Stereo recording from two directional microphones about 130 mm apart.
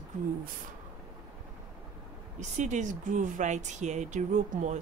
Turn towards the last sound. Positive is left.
turn(degrees=-65)  # may be behind; listen again after turning